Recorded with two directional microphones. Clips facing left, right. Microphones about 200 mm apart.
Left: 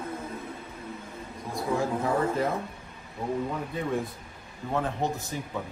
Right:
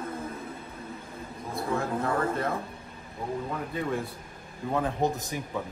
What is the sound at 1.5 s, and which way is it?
A man's voice, centre (ahead or behind).